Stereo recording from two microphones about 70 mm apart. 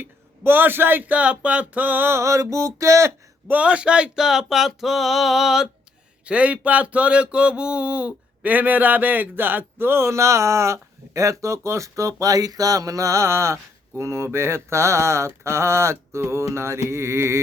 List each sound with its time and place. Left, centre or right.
0.0 s speech: right
2.1 s music: right
3.5 s speech: centre
6.2 s speech: centre; by 17.4 s right